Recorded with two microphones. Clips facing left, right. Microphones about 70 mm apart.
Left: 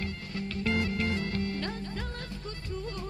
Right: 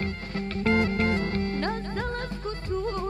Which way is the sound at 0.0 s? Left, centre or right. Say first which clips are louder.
Right 5 dB; right.